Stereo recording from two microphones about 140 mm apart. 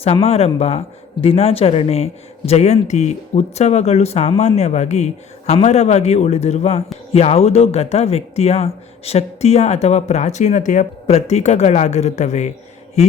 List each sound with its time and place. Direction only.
0.0 s speech: 45° left (ahead or behind)